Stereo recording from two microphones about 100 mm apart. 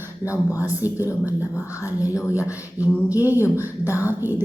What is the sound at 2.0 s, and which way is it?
Speech, 35° left (ahead or behind).